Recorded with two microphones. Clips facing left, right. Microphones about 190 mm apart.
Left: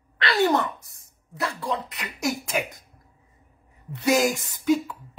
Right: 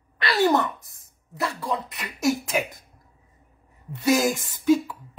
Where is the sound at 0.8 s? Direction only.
Centre (ahead or behind).